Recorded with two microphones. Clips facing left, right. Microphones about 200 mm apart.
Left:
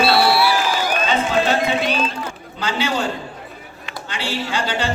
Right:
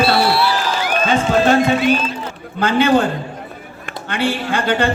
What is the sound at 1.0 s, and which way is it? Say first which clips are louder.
A man's voice: right 6 dB; 50° right (ahead or behind).